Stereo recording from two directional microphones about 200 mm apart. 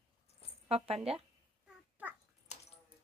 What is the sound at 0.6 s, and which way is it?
Speech, 30° right (ahead or behind).